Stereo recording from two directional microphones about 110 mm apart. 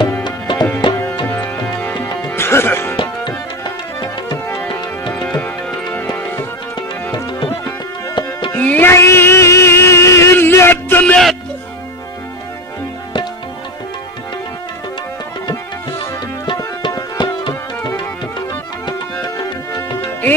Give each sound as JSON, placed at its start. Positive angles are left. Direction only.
{"t": 0.2, "sound": "music", "side_deg": 40}
{"t": 1.2, "sound": "music", "side_deg": 20}
{"t": 2.0, "sound": "music", "side_deg": 35}
{"t": 2.3, "sound": "music", "side_deg": 20}
{"t": 3.0, "sound": "tabla", "side_deg": 40}
{"t": 5.2, "sound": "music", "side_deg": 5}
{"t": 5.9, "sound": "music", "side_deg": 15}
{"t": 7.6, "sound": "tabla", "side_deg": 45}
{"t": 8.5, "sound": "music", "side_deg": 15}
{"t": 16.8, "sound": "tabla", "side_deg": 45}
{"t": 19.2, "sound": "music", "side_deg": 40}